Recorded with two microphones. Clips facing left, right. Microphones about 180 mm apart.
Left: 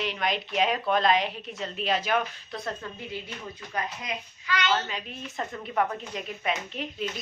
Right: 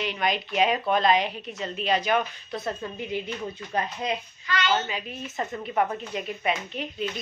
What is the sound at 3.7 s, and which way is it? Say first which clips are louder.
Speech: right 5 dB; 30° right (ahead or behind).